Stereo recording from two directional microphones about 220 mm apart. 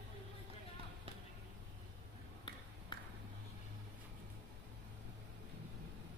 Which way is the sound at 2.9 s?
20° left (ahead or behind).